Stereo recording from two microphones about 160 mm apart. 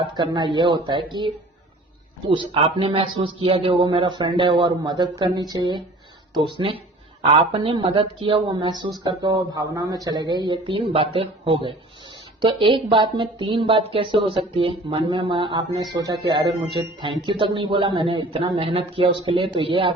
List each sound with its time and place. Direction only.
0.0 s speech: 30° right (ahead or behind)
2.3 s a man's voice: 30° right (ahead or behind)